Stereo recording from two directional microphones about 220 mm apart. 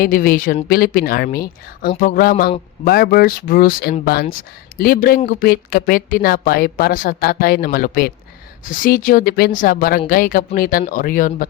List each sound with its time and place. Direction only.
0.0 s a woman's voice: 40° left (ahead or behind)